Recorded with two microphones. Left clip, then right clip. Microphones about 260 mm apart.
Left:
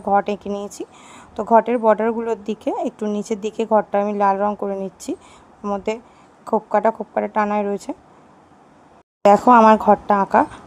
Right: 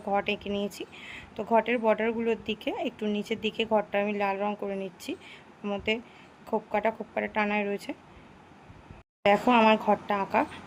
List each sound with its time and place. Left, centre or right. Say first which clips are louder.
0.0 s speech: left 10 dB; left
9.2 s speech: left 11 dB; left